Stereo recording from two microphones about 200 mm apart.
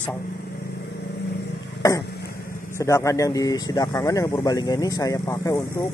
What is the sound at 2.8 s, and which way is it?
Speech, 15° left (ahead or behind).